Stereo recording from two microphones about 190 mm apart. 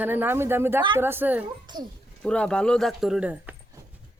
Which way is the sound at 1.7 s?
25° right (ahead or behind).